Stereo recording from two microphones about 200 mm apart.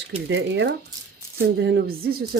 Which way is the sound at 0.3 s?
60° right (ahead or behind).